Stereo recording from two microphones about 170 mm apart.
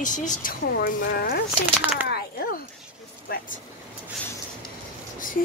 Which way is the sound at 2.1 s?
70° left (ahead or behind).